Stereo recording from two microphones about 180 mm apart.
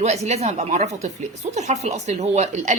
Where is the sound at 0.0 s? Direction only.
40° right (ahead or behind).